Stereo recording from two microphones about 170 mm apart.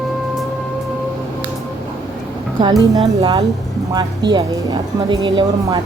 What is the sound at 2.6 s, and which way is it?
Speech, 25° right (ahead or behind).